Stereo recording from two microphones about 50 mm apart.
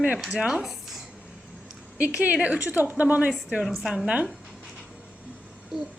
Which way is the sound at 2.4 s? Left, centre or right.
Right.